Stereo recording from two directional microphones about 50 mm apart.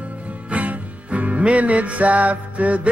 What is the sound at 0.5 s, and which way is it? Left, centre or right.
Music, right.